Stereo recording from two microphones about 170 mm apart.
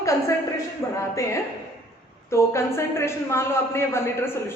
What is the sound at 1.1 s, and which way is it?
A man's voice, 15° left (ahead or behind).